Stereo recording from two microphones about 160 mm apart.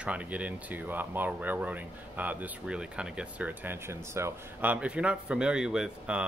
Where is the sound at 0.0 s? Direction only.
10° right (ahead or behind).